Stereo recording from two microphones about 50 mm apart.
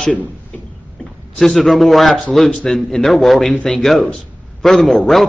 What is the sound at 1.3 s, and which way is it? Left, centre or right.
A man's voice, centre.